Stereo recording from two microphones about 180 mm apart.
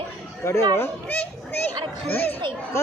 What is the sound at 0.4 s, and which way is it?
A child's voice, 15° left (ahead or behind).